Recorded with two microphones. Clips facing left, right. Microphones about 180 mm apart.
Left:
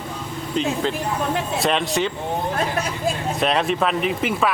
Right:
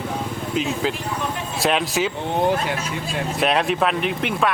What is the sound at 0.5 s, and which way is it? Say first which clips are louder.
Speech: left 2 dB; 5° right (ahead or behind).